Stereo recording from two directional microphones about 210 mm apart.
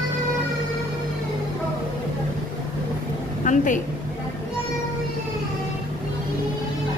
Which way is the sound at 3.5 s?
40° left (ahead or behind).